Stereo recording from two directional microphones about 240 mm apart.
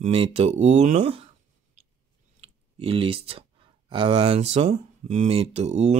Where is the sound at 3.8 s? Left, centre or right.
Right.